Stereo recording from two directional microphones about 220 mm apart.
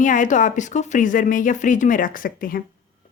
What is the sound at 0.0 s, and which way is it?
Speech, 35° left (ahead or behind).